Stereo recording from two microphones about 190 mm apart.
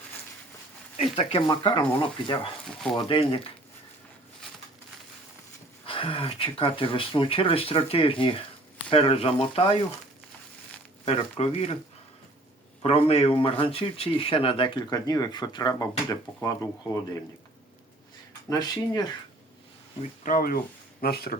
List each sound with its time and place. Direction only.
1.1 s speech: 30° left (ahead or behind)
5.8 s speech: 30° left (ahead or behind)
11.0 s speech: 30° left (ahead or behind)
12.8 s speech: 30° left (ahead or behind)
18.4 s speech: 20° left (ahead or behind)
20.0 s speech: 45° left (ahead or behind)